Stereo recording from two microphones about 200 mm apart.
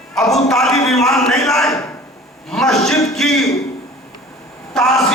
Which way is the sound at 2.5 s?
Centre (ahead or behind).